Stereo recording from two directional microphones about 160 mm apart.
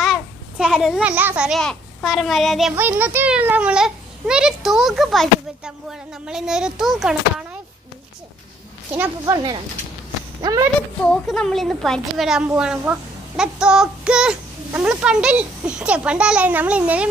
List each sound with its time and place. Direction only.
0.0 s a sound: centre (ahead or behind)
1.6 s a child's voice: 5° left (ahead or behind)
2.7 s a child's voice: 10° right (ahead or behind)
9.2 s speech: 25° right (ahead or behind)
11.0 s a child's voice: 5° left (ahead or behind)